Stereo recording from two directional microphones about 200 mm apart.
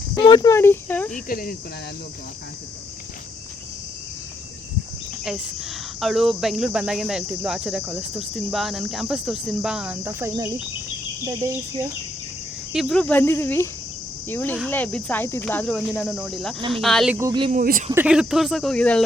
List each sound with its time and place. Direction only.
0.2 s speech: 20° left (ahead or behind)
1.1 s speech: 45° left (ahead or behind)
5.2 s speech: centre (ahead or behind)
12.7 s speech: centre (ahead or behind)
17.2 s speech: 15° right (ahead or behind)
17.5 s speech: 45° right (ahead or behind)
17.9 s speech: 5° right (ahead or behind)